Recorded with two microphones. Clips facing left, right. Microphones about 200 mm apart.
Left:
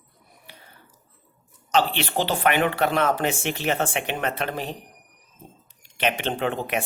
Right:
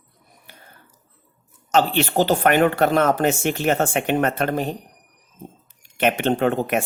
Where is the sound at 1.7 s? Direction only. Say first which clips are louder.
Right 4 dB; 45° right (ahead or behind).